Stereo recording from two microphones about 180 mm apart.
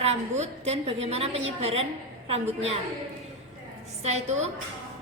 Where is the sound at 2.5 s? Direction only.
35° right (ahead or behind).